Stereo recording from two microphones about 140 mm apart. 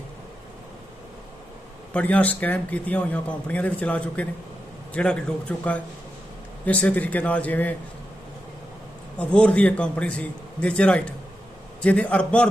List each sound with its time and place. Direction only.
1.9 s speech: 10° left (ahead or behind)
9.1 s speech: 10° left (ahead or behind)